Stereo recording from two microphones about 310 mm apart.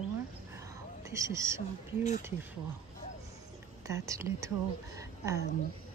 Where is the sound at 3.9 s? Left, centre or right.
Centre.